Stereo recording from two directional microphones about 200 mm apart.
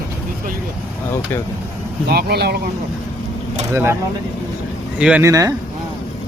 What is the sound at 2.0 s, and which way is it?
Speech, 50° right (ahead or behind).